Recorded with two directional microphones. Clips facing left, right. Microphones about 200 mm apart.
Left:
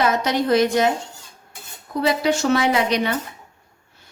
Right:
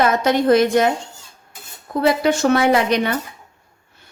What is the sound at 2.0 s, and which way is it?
A woman's voice, 55° right (ahead or behind).